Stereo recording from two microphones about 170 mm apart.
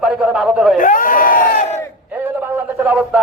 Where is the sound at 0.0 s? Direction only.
5° right (ahead or behind).